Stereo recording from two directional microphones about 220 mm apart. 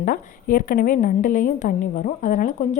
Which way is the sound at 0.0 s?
40° left (ahead or behind).